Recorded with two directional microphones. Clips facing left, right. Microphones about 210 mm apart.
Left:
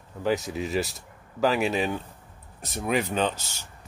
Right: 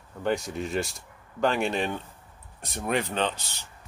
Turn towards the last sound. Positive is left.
turn(degrees=10)  # may be behind; listen again after turning